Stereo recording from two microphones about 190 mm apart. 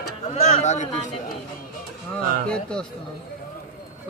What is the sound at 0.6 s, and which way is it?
Speech, 35° left (ahead or behind).